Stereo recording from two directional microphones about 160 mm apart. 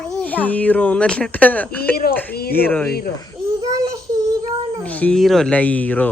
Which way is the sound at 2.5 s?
10° left (ahead or behind).